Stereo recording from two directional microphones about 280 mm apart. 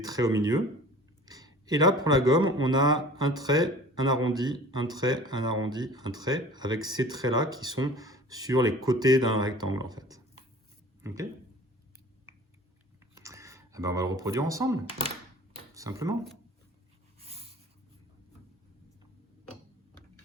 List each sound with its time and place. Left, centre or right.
0.0 s a man's voice: centre
13.1 s speech: centre
15.5 s a sound: centre